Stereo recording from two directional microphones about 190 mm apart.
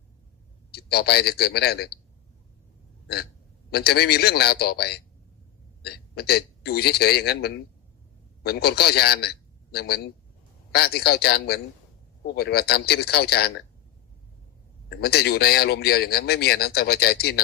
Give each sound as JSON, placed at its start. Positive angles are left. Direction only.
{"t": 0.7, "sound": "a man's voice", "side_deg": 55}
{"t": 3.7, "sound": "a man's voice", "side_deg": 55}
{"t": 14.8, "sound": "a man's voice", "side_deg": 55}